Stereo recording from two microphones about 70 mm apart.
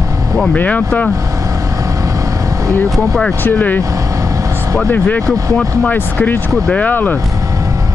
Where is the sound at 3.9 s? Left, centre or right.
Right.